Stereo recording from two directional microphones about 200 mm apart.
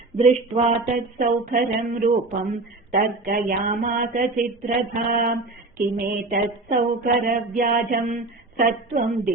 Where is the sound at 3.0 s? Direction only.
45° right (ahead or behind).